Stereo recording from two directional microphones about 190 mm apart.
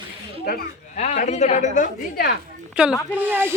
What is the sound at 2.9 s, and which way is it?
Speech, 15° left (ahead or behind).